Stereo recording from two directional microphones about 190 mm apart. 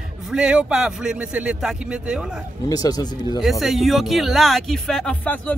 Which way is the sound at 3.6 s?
Centre (ahead or behind).